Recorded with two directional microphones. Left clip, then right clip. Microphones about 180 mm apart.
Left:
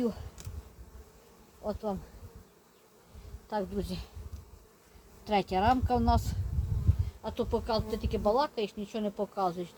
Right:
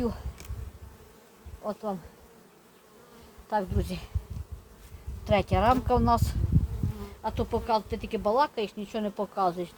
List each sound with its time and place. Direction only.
1.6 s bee: 10° right (ahead or behind)
3.5 s speech: 30° right (ahead or behind)
5.2 s speech: 30° right (ahead or behind)